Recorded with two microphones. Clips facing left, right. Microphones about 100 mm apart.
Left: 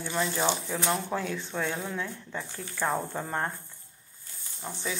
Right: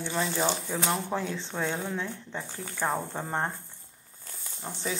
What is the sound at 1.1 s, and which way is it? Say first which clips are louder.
Speech: even; 25° right (ahead or behind).